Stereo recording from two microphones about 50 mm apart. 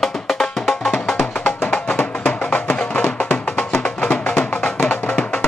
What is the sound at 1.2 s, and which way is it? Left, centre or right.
Music, left.